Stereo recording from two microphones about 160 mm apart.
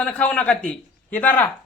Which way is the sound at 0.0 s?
10° left (ahead or behind).